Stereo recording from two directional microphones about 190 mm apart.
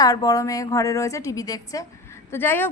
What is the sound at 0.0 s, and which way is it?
A woman's voice, 20° left (ahead or behind).